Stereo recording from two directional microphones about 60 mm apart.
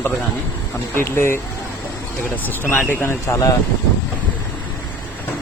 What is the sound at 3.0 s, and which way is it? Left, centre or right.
Speech, left.